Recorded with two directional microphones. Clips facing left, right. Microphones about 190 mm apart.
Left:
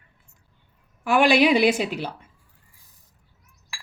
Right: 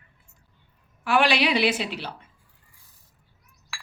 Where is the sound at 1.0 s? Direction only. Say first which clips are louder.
Left 4 dB; 45° left (ahead or behind).